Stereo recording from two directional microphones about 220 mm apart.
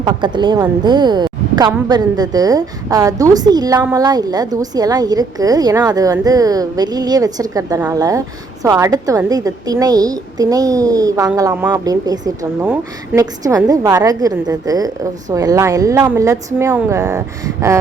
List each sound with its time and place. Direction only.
0.0 s a woman's voice: 20° right (ahead or behind)